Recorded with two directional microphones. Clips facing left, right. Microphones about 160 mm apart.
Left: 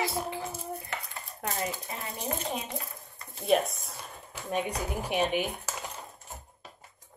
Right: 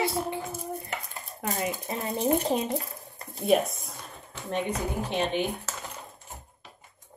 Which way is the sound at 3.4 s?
Centre (ahead or behind).